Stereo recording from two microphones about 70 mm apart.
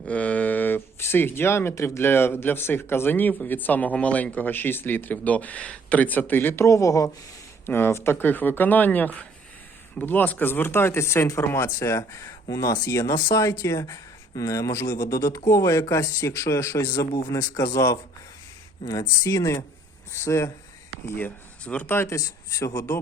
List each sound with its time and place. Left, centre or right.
0.1 s speech: left
6.7 s speech: left
7.7 s speech: left
17.1 s speech: left
17.4 s speech: left
18.9 s speech: left
20.1 s speech: left
21.2 s speech: left
22.0 s a man's voice: left